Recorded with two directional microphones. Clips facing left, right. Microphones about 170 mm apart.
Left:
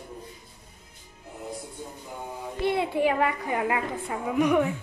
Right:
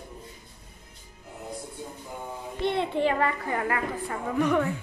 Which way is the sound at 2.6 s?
5° left (ahead or behind).